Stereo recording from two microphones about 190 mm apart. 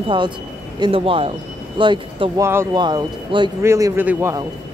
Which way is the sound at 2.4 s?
15° right (ahead or behind).